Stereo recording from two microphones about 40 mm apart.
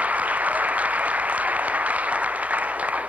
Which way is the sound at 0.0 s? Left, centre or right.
Right.